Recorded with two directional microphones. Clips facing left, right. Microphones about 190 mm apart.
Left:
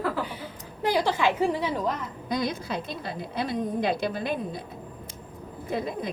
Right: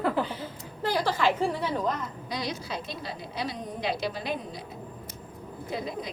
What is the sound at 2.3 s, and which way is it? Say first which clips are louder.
A woman's voice: left 6 dB; 55° left (ahead or behind).